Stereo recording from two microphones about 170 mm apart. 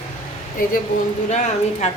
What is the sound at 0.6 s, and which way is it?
Speech, 55° left (ahead or behind).